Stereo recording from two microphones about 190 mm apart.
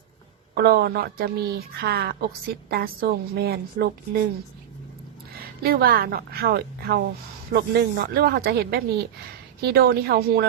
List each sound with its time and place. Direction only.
0.5 s a woman's voice: 55° right (ahead or behind)
5.6 s a woman's voice: 55° right (ahead or behind)